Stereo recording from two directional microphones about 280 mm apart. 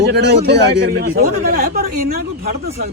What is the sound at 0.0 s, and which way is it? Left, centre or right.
A man's voice, right.